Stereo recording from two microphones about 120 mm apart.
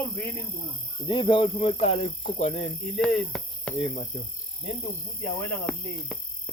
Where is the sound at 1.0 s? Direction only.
45° left (ahead or behind); by 2.7 s 75° left (ahead or behind).